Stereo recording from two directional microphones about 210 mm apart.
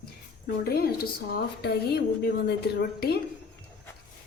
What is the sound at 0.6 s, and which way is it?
A woman's voice, 45° left (ahead or behind).